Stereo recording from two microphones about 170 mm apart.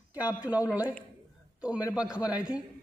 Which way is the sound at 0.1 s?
10° right (ahead or behind).